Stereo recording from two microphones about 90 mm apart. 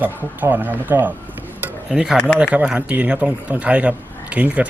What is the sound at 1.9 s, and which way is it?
Speech, 10° right (ahead or behind).